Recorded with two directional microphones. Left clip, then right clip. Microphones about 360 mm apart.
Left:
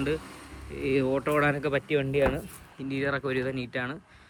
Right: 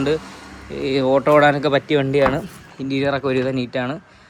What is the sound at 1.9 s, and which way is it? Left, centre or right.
Speech, right.